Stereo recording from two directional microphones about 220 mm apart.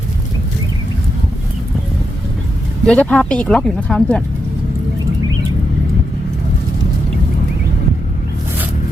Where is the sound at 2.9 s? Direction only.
5° left (ahead or behind).